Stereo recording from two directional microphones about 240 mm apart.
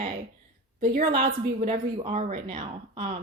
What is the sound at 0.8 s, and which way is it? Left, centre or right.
A woman's voice, right.